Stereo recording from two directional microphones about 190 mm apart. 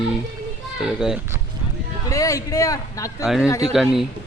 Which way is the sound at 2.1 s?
15° left (ahead or behind).